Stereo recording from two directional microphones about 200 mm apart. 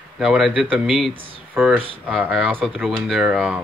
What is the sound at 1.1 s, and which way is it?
Speech, 25° right (ahead or behind).